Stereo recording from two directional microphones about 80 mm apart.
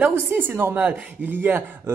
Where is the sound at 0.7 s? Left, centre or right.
Centre.